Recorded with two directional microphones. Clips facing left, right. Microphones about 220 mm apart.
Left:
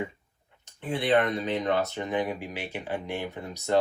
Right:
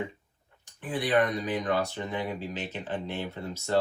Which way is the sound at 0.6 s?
25° left (ahead or behind).